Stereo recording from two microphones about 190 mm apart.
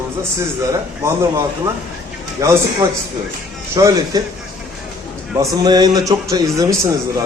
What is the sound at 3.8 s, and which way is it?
Speech, 15° right (ahead or behind).